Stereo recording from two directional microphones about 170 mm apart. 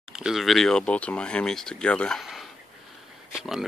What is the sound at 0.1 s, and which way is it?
Speech, 5° right (ahead or behind).